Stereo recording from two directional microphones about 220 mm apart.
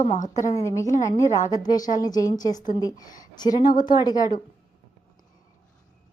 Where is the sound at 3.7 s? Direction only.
20° left (ahead or behind).